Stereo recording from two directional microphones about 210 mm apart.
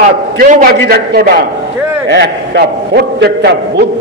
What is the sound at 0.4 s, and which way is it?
A man's voice, 40° right (ahead or behind).